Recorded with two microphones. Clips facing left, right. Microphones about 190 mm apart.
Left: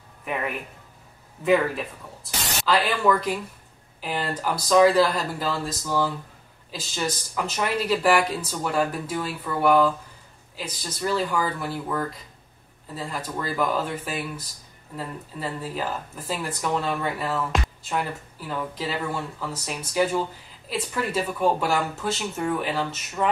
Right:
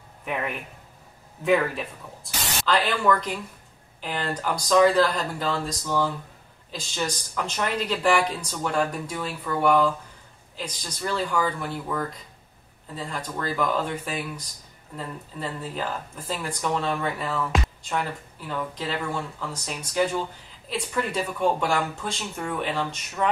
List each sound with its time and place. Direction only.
0.2 s speech: centre (ahead or behind)